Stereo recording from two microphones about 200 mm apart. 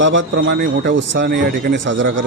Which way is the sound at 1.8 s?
70° right (ahead or behind).